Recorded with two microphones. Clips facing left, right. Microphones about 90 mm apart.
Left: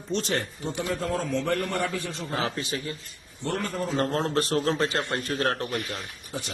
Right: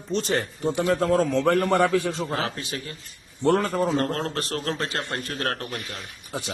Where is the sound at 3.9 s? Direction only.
10° left (ahead or behind).